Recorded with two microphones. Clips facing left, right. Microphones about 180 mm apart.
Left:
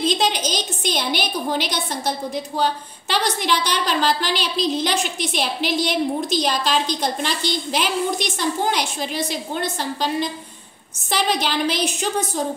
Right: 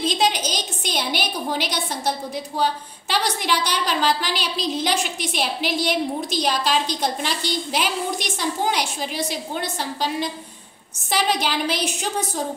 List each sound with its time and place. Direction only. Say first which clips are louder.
0.0 s a woman's voice: left 1 dB; 10° right (ahead or behind)